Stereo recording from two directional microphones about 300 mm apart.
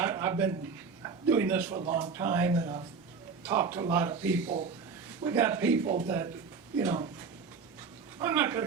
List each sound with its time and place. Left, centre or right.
0.0 s a sound: centre
1.0 s speech: centre
4.4 s speech: right
5.2 s speech: centre
8.2 s speech: centre